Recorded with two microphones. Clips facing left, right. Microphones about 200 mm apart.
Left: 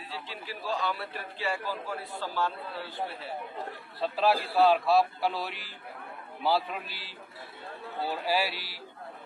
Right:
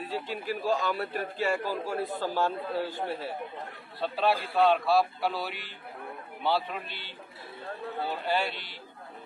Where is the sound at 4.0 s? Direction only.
Centre (ahead or behind).